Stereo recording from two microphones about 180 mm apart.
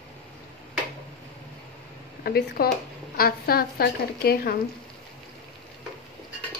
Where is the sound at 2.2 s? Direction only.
60° left (ahead or behind).